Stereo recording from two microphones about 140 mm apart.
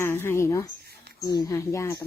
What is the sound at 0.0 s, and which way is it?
A woman's voice, 15° left (ahead or behind).